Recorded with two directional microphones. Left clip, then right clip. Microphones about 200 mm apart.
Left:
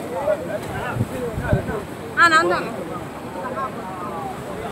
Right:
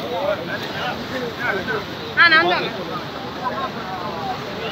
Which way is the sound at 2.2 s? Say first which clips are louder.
Right 1 dB; 55° left (ahead or behind).